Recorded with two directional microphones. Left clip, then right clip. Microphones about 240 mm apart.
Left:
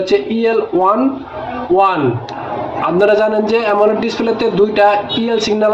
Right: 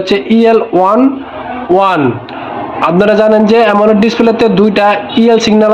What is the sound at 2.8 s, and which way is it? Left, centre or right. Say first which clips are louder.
A man's voice: right 4 dB; right.